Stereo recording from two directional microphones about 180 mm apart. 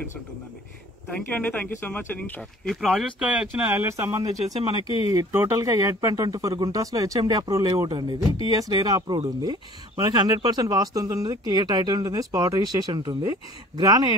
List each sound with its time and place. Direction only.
1.1 s speech: 10° left (ahead or behind); by 14.0 s 20° right (ahead or behind)